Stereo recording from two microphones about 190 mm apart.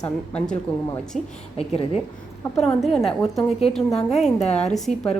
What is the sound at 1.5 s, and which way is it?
Speech, 30° left (ahead or behind).